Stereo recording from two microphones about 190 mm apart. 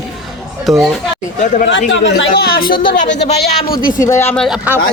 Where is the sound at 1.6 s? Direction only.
80° left; by 2.7 s 50° left (ahead or behind).